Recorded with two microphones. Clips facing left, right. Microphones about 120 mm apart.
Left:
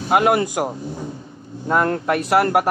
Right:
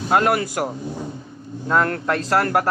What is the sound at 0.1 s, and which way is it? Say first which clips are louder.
Speech: left 2 dB; 20° left (ahead or behind).